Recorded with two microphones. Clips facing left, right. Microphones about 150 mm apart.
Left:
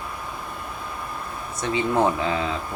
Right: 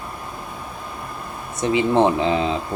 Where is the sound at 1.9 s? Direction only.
25° right (ahead or behind).